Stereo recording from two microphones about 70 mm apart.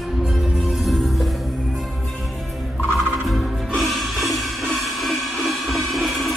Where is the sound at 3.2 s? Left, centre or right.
Centre.